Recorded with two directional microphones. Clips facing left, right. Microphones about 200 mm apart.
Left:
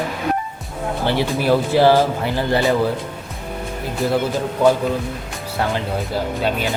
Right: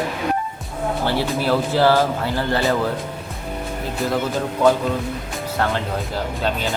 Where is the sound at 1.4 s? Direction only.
15° left (ahead or behind).